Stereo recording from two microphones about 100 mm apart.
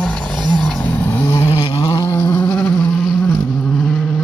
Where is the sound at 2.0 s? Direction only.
30° left (ahead or behind).